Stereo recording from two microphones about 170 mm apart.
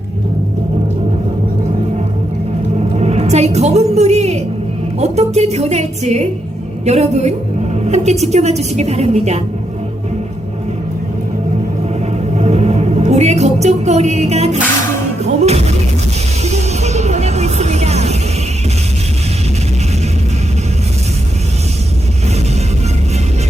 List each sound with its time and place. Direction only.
2.9 s music: 40° right (ahead or behind)
4.9 s a woman's voice: 40° right (ahead or behind)
12.4 s music: 40° right (ahead or behind)
15.4 s a woman's voice: 40° right (ahead or behind)
16.4 s music: 40° right (ahead or behind)